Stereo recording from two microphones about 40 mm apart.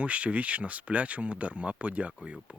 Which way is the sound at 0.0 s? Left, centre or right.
Right.